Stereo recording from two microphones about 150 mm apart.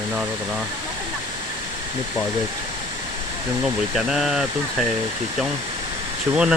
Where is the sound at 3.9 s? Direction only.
5° right (ahead or behind).